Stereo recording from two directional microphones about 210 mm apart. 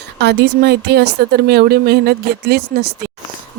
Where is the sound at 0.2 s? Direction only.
55° right (ahead or behind).